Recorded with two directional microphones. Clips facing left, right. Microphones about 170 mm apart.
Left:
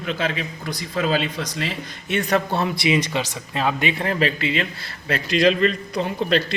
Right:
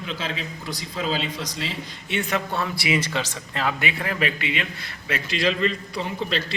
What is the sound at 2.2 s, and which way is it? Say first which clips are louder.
A man's voice: left 5 dB; 40° left (ahead or behind).